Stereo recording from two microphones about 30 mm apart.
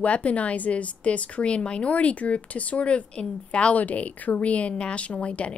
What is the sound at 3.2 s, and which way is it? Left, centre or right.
Speech, left.